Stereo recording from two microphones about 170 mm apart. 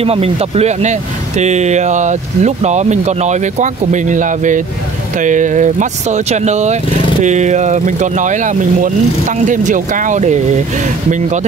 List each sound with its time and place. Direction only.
0.0 s speech: 35° right (ahead or behind)